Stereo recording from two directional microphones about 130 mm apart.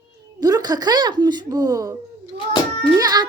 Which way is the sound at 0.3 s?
30° right (ahead or behind).